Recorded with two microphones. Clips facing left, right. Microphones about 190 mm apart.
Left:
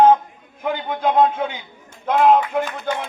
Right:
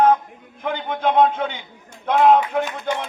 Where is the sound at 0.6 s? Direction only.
5° left (ahead or behind).